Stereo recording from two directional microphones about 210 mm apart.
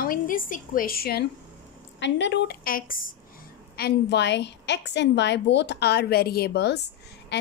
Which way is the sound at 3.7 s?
50° left (ahead or behind).